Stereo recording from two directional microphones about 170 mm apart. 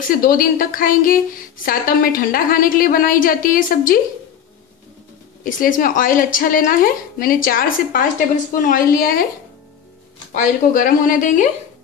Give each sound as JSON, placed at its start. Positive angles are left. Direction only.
{"t": 0.1, "sound": "a woman's voice", "side_deg": 55}
{"t": 5.4, "sound": "a woman's voice", "side_deg": 55}
{"t": 10.3, "sound": "speech", "side_deg": 50}